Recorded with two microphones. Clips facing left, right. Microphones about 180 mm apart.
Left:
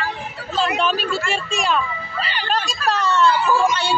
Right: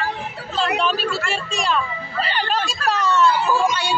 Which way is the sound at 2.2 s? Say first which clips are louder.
Right 5 dB; 45° right (ahead or behind).